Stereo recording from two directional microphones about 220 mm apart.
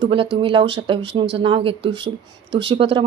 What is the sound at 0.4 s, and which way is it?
Speech, 20° right (ahead or behind).